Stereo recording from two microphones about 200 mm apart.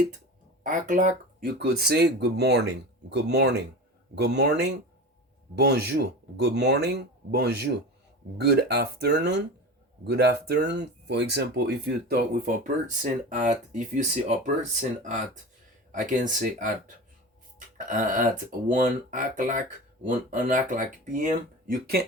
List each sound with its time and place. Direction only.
0.6 s speech: 40° right (ahead or behind)